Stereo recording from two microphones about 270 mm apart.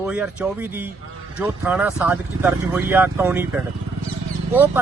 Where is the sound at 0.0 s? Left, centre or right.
Centre.